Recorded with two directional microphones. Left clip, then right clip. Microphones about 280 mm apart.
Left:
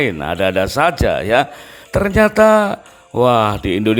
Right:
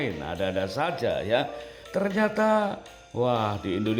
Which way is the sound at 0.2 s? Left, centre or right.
Left.